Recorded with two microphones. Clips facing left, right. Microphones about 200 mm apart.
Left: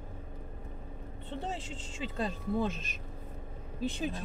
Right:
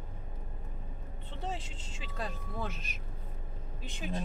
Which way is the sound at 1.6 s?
30° left (ahead or behind).